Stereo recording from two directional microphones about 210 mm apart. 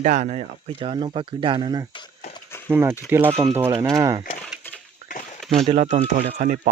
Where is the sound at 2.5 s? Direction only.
10° left (ahead or behind).